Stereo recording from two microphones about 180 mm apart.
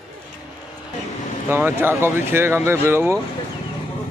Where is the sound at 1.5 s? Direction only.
10° right (ahead or behind).